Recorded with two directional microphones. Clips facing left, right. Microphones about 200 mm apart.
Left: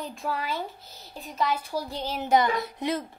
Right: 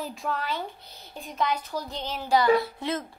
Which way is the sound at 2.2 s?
20° left (ahead or behind).